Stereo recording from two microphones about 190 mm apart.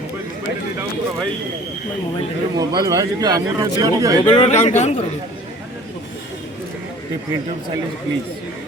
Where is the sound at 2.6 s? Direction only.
20° right (ahead or behind).